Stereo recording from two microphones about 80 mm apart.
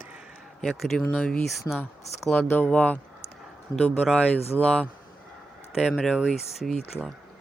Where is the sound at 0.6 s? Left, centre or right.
Centre.